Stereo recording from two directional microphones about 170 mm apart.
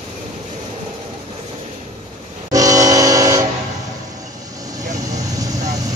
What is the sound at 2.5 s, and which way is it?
Vehicle, 20° right (ahead or behind).